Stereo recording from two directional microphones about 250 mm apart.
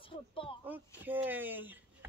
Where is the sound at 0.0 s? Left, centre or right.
Left.